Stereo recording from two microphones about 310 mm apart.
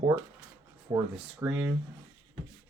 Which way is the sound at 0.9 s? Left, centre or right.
Centre.